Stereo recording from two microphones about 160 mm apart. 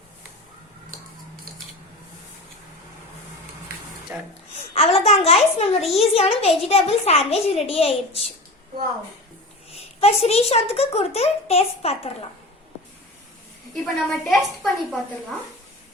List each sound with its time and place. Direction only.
4.1 s speech: 15° right (ahead or behind)
4.5 s a child's voice: 35° left (ahead or behind)
10.0 s a child's voice: 40° left (ahead or behind)
13.8 s a woman's voice: centre (ahead or behind)